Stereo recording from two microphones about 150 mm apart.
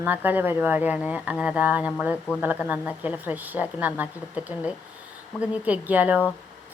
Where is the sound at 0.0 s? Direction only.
10° right (ahead or behind).